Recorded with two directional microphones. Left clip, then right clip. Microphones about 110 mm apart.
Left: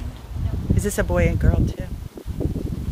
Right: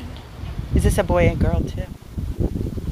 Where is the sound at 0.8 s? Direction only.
30° left (ahead or behind).